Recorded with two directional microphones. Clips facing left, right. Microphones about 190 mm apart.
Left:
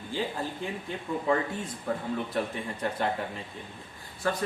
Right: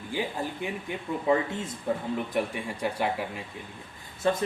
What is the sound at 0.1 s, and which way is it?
Speech, 15° right (ahead or behind).